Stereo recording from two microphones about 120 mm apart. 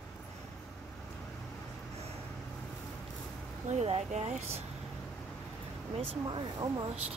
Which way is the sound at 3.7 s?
70° right (ahead or behind).